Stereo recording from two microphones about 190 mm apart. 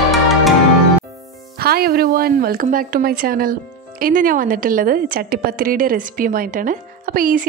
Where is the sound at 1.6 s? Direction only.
55° right (ahead or behind).